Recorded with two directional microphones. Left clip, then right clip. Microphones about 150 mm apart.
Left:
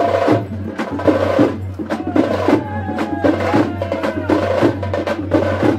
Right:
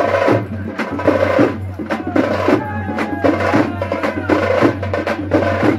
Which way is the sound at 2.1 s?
25° right (ahead or behind).